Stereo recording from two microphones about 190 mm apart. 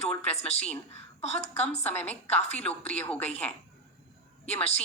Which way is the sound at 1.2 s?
35° left (ahead or behind).